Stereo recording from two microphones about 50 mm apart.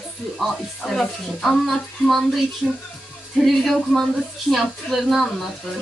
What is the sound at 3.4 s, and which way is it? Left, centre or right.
Speech, centre.